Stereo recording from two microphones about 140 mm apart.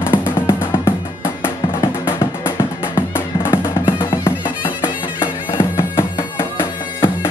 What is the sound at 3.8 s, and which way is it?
Music, 35° left (ahead or behind).